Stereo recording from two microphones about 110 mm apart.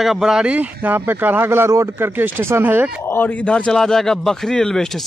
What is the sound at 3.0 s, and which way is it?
A man's voice, 15° left (ahead or behind).